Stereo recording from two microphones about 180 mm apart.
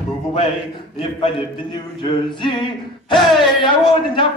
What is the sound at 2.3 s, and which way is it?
Speech, 25° left (ahead or behind).